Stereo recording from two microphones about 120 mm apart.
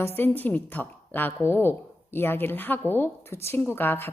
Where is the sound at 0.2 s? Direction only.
15° left (ahead or behind).